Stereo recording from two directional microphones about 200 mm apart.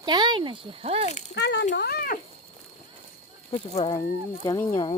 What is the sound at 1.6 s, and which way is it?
Speech, 50° left (ahead or behind).